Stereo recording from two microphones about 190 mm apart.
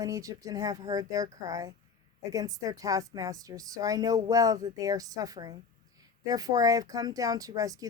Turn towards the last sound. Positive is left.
turn(degrees=-20)  # may be behind; listen again after turning